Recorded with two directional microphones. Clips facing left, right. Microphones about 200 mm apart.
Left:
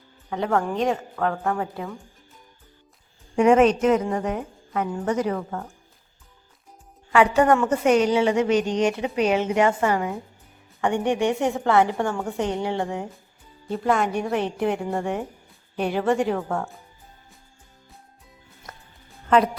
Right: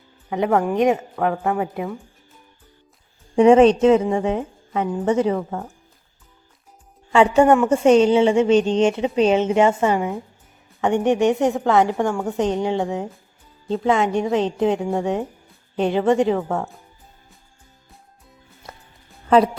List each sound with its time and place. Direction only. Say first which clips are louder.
0.3 s a woman's voice: right 4 dB; 15° right (ahead or behind)
3.3 s a woman's voice: right 5 dB; 30° right (ahead or behind)
7.1 s a woman's voice: right 4 dB; 25° right (ahead or behind)
14.8 s speech: right 4 dB; centre (ahead or behind)
15.7 s a woman's voice: right 4 dB; 20° right (ahead or behind)
16.3 s speech: right 4 dB; 5° right (ahead or behind)